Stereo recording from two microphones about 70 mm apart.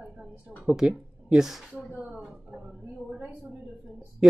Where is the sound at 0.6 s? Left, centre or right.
Centre.